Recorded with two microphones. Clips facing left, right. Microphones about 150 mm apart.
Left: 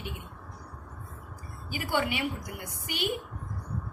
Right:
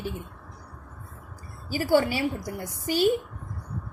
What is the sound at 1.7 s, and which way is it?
A woman's voice, 35° right (ahead or behind).